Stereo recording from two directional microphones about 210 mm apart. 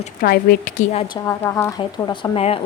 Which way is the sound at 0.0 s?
40° left (ahead or behind).